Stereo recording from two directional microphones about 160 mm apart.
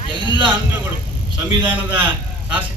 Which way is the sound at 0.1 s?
25° left (ahead or behind).